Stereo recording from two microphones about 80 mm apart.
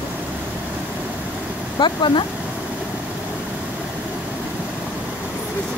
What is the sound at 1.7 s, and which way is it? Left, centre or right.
Speech, left.